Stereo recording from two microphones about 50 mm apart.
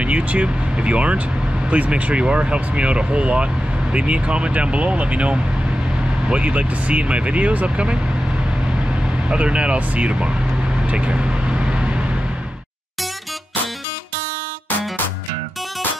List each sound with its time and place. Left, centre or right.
0.0 s speech: right
9.3 s speech: right
10.9 s vehicle: right